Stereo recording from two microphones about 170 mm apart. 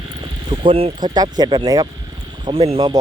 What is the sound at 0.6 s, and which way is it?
Speech, 30° right (ahead or behind).